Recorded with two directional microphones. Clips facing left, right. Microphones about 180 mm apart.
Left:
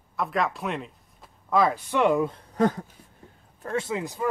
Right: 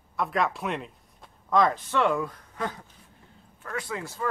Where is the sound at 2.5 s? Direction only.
45° left (ahead or behind).